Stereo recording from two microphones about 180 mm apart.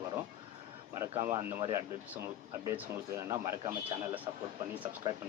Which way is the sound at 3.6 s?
30° right (ahead or behind).